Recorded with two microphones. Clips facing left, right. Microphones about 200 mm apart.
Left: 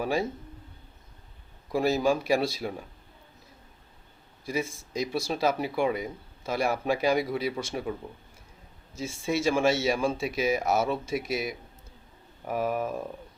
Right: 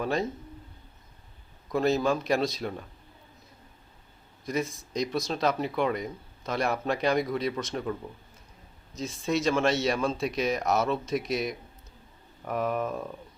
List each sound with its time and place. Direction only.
0.0 s speech: 10° left (ahead or behind)
1.7 s speech: 10° left (ahead or behind)
4.6 s speech: 25° left (ahead or behind)
5.3 s speech: 10° left (ahead or behind)
9.0 s speech: 10° left (ahead or behind)